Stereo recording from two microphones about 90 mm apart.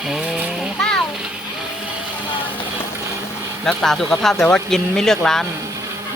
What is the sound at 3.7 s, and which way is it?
Speech, 5° left (ahead or behind).